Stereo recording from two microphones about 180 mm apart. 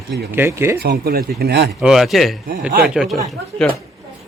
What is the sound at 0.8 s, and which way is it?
Speech, 60° right (ahead or behind).